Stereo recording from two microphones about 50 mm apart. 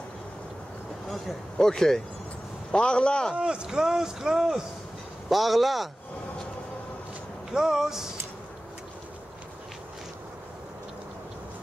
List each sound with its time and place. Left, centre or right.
1.0 s a man's voice: centre
3.3 s speech: centre
7.5 s speech: centre